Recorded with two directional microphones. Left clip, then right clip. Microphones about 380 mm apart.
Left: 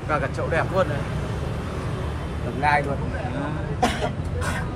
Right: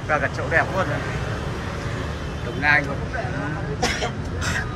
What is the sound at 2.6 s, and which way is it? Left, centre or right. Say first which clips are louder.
Speech: right 2 dB; centre.